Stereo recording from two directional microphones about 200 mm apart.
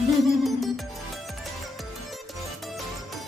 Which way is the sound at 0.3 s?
Centre (ahead or behind).